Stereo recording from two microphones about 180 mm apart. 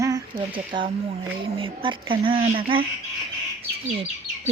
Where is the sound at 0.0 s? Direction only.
25° right (ahead or behind).